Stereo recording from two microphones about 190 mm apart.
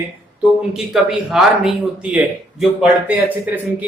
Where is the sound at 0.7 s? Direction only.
Centre (ahead or behind).